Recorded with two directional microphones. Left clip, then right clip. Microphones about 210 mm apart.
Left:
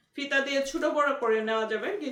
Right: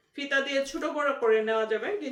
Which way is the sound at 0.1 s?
10° left (ahead or behind).